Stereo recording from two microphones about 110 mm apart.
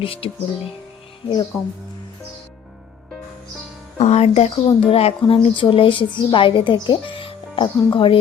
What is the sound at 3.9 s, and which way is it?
Speech, 85° left.